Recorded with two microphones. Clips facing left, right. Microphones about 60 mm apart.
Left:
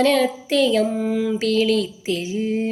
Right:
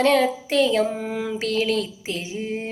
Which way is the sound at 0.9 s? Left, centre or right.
Right.